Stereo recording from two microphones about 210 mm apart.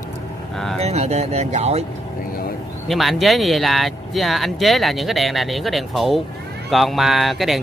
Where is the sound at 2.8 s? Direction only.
Centre (ahead or behind).